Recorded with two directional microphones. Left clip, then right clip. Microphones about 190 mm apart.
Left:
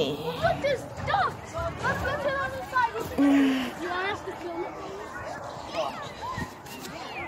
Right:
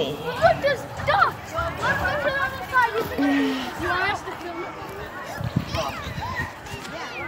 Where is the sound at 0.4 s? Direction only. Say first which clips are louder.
Right 7 dB; centre (ahead or behind).